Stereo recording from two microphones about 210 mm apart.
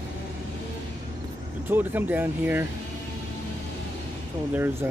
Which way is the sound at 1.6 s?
10° right (ahead or behind).